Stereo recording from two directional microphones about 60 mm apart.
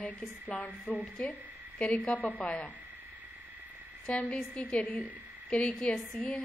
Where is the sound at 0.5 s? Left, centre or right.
Left.